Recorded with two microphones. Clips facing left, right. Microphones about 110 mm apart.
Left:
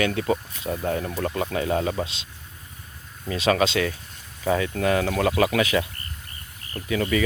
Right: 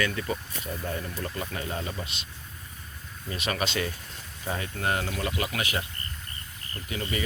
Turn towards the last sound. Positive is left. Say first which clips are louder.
# left 9 dB
turn(degrees=75)  # may be behind; listen again after turning